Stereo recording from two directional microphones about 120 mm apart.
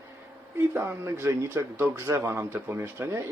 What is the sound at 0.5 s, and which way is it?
A man's voice, 20° right (ahead or behind).